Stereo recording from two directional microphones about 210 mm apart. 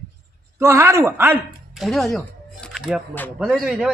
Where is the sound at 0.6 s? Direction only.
15° right (ahead or behind).